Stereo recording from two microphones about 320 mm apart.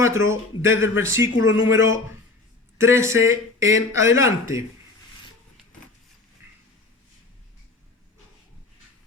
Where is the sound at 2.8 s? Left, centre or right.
Centre.